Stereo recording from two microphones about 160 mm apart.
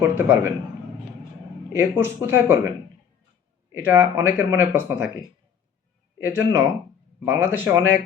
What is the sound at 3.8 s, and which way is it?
Speech, 15° right (ahead or behind).